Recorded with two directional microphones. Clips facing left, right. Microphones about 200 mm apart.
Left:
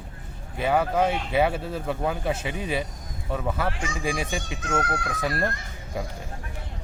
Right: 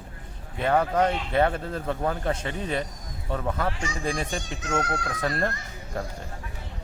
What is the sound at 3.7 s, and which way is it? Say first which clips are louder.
Speech: left 1 dB; 55° left (ahead or behind).